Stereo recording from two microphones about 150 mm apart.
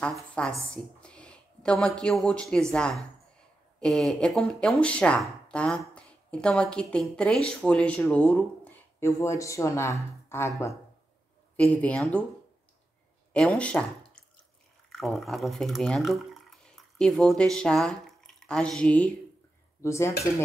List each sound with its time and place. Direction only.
0.0 s a woman's voice: 5° left (ahead or behind)
11.5 s speech: 10° left (ahead or behind)
13.3 s speech: 5° left (ahead or behind)
19.8 s speech: 20° left (ahead or behind)